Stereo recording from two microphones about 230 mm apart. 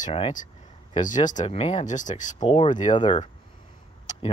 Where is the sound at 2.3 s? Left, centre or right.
Left.